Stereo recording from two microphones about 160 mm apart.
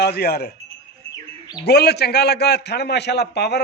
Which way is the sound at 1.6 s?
90° left.